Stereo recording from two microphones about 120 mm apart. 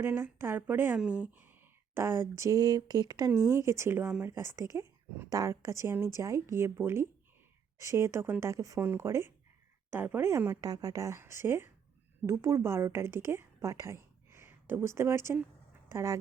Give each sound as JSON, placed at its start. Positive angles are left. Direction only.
{"t": 0.0, "sound": "a woman's voice", "side_deg": -20}
{"t": 10.6, "sound": "a woman's voice", "side_deg": -30}